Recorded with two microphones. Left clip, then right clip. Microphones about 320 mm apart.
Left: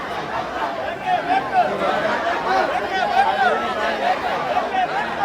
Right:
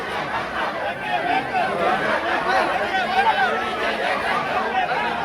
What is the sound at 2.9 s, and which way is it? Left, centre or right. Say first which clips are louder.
Chatter: left 2 dB; left.